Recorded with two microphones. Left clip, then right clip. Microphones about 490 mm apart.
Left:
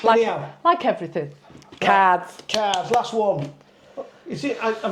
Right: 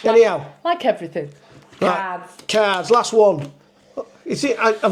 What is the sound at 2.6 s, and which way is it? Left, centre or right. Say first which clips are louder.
Speech: right 5 dB; right.